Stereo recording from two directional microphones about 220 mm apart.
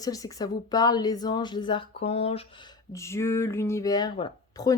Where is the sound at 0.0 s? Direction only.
15° left (ahead or behind).